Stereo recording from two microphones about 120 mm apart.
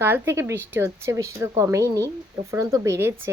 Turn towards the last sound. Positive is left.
turn(degrees=-20)  # may be behind; listen again after turning